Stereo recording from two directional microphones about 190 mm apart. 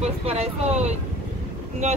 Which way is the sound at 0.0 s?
35° right (ahead or behind).